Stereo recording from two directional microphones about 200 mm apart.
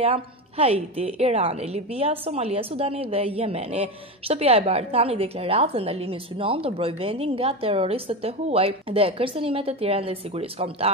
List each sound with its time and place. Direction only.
0.0 s a woman's voice: 30° right (ahead or behind)